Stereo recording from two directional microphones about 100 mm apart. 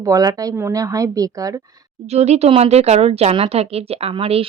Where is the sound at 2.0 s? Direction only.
90° right.